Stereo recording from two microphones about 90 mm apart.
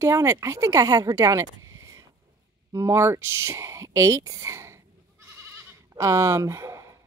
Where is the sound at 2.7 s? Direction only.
30° right (ahead or behind).